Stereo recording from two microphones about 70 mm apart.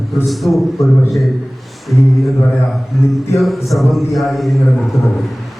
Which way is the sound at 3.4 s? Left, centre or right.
Centre.